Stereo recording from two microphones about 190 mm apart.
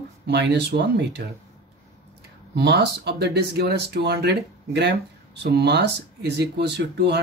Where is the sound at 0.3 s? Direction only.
65° right (ahead or behind).